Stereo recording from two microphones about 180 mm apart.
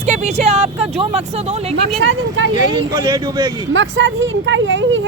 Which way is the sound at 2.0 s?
90° right.